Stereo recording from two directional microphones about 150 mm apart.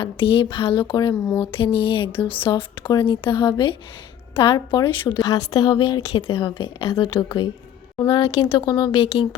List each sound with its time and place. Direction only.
0.0 s speech: 35° left (ahead or behind)
1.1 s speech: 5° left (ahead or behind)
1.5 s a woman's voice: 35° left (ahead or behind)
6.4 s a woman's voice: 25° left (ahead or behind)